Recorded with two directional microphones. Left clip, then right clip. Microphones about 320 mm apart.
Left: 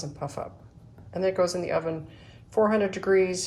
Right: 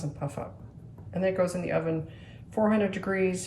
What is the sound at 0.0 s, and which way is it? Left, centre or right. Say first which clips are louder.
A woman's voice: left 2 dB; centre.